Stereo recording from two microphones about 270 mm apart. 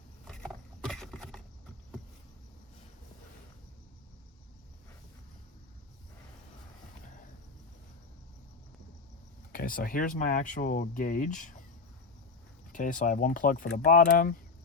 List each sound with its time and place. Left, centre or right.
0.3 s vehicle: centre
9.5 s speech: left
12.7 s speech: left